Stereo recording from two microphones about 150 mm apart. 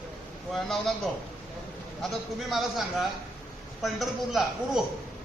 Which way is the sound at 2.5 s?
Centre (ahead or behind).